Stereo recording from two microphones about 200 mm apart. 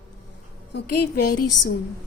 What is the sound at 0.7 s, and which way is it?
Speech, 50° left (ahead or behind).